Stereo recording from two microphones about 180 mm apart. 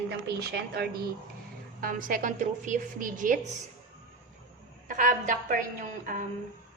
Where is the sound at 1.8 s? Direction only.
50° right (ahead or behind).